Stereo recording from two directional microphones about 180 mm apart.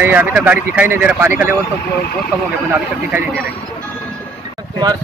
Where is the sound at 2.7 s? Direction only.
10° right (ahead or behind).